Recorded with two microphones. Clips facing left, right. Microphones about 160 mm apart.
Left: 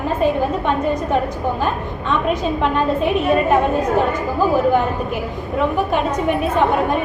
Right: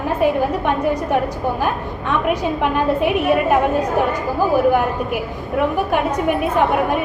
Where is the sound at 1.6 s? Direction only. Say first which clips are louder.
Even; 15° right (ahead or behind).